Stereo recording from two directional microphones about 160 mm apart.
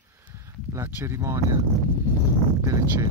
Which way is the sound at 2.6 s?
20° right (ahead or behind).